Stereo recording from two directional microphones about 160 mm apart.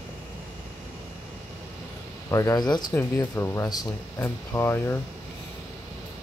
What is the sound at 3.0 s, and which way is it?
Speech, 15° left (ahead or behind).